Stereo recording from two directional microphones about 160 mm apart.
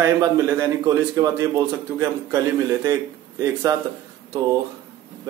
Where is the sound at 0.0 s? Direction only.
20° right (ahead or behind).